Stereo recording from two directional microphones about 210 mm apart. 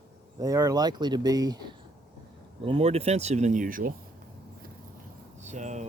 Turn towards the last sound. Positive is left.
turn(degrees=-35)  # may be behind; listen again after turning